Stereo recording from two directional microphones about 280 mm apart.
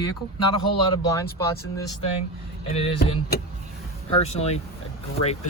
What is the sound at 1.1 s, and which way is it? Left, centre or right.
Speech, centre.